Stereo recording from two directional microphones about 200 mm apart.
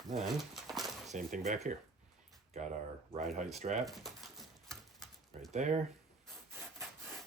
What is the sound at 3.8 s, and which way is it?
Typewriter, centre (ahead or behind).